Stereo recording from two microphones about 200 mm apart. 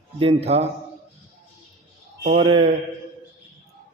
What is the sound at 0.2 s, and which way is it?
Speech, 30° right (ahead or behind).